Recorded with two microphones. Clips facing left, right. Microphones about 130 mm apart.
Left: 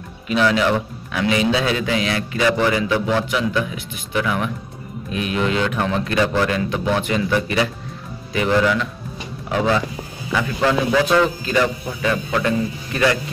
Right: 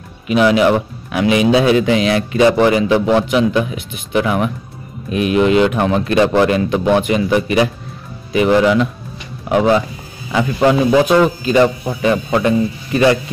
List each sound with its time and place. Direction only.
0.3 s a man's voice: 15° right (ahead or behind)